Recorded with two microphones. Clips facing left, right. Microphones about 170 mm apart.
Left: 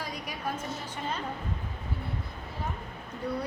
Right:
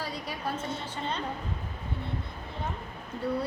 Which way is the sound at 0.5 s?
30° right (ahead or behind).